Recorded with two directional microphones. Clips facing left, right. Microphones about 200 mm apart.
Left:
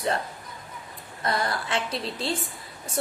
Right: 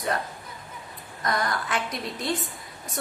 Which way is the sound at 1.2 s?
30° left (ahead or behind).